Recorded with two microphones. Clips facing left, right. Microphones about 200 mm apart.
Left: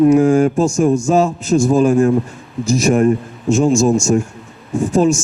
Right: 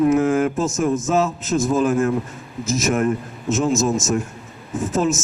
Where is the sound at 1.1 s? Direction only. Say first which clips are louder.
Left 4 dB; 35° left (ahead or behind).